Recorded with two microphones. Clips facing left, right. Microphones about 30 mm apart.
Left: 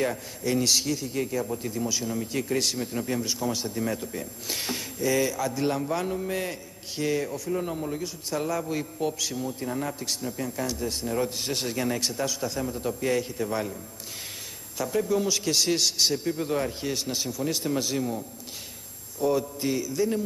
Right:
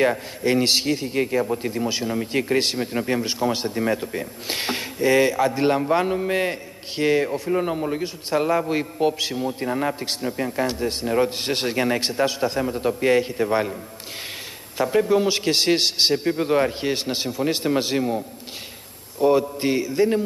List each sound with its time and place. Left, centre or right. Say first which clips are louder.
0.0 s a man's voice: right 7 dB; right
14.8 s a man's voice: right 7 dB; right